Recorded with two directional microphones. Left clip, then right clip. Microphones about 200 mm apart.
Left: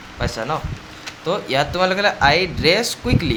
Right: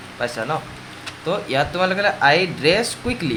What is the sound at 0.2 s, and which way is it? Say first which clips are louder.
Speech: even; 10° left (ahead or behind).